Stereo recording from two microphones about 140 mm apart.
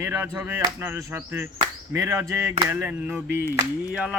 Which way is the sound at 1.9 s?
20° right (ahead or behind).